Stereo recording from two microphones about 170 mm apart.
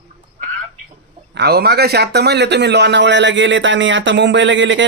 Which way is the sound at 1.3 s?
75° right (ahead or behind).